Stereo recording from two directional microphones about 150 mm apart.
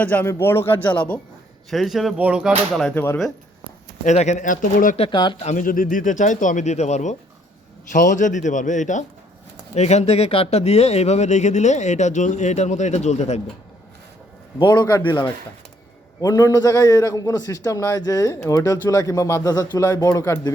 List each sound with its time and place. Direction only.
0.0 s speech: 10° left (ahead or behind)
2.9 s speech: 15° left (ahead or behind)
4.0 s speech: 50° left (ahead or behind)
4.9 s speech: 35° left (ahead or behind)
5.5 s speech: 60° left (ahead or behind)
7.9 s speech: 60° left (ahead or behind)
14.6 s a man's voice: 25° left (ahead or behind)